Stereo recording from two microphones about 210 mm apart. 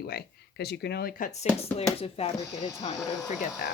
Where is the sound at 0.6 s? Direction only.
50° left (ahead or behind).